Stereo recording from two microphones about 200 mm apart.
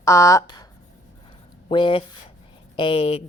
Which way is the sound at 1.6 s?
25° left (ahead or behind).